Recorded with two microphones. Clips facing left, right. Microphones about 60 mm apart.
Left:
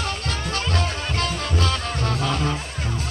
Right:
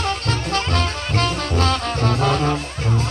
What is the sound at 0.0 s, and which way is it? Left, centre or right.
Music, right.